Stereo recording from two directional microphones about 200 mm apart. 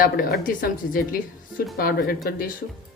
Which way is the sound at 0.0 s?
45° left (ahead or behind).